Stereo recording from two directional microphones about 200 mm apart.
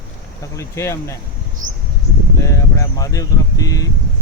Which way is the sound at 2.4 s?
15° left (ahead or behind).